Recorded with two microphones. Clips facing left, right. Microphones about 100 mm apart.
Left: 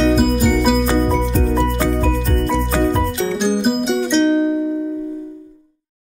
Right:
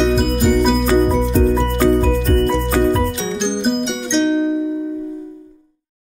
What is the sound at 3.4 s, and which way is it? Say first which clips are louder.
Music: left 1 dB; 5° left (ahead or behind).